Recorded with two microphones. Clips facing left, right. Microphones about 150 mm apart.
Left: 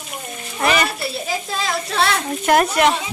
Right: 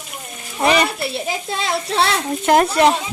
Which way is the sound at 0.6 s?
20° right (ahead or behind).